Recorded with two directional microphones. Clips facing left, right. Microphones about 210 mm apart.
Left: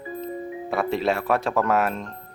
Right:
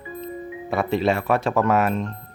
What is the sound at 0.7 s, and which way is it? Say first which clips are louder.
Speech: right 2 dB; centre (ahead or behind).